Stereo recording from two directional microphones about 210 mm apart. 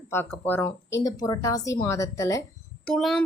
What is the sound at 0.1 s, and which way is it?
Speech, 10° left (ahead or behind).